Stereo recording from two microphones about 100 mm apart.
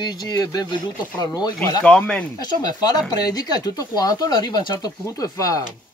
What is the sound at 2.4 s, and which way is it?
Speech, 45° left (ahead or behind).